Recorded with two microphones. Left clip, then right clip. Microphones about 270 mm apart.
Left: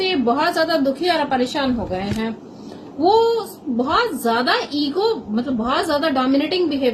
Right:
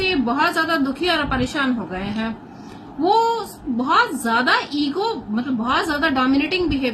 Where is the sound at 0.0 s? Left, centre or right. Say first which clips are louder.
Left 1 dB; right.